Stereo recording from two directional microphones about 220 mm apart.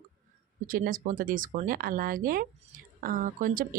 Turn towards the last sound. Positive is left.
turn(degrees=-40)  # may be behind; listen again after turning